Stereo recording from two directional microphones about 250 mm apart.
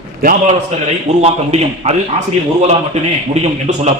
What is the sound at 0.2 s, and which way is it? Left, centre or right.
A man's voice, right.